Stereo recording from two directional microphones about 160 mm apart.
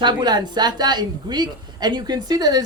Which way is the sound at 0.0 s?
30° right (ahead or behind).